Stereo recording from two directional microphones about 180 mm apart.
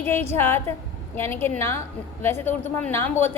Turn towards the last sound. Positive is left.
turn(degrees=10)  # may be behind; listen again after turning